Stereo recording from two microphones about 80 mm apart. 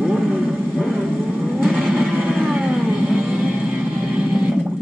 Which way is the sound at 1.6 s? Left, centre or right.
Centre.